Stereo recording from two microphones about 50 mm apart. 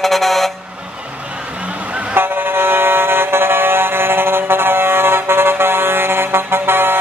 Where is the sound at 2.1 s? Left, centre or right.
Right.